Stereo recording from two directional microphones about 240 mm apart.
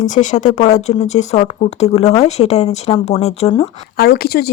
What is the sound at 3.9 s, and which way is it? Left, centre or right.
Speech, left.